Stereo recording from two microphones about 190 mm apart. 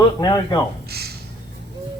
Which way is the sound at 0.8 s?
55° right (ahead or behind).